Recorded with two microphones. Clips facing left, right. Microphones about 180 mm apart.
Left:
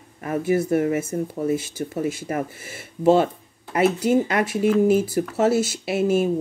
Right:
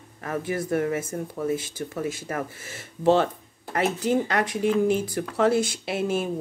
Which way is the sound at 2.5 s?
10° left (ahead or behind).